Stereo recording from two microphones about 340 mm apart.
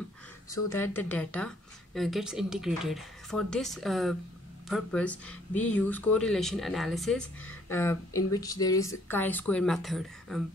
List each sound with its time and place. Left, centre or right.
0.5 s speech: centre